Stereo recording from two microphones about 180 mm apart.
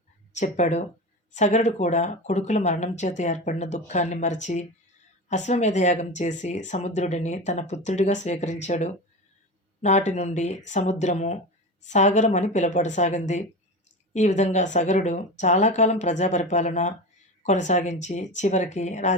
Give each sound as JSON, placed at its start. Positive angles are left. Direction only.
{"t": 0.3, "sound": "speech", "side_deg": 40}